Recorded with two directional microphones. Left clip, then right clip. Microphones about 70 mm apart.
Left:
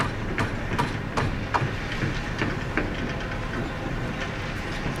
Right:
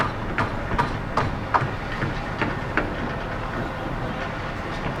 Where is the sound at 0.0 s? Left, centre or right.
Left.